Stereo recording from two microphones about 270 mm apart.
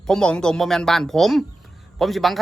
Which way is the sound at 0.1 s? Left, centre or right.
Centre.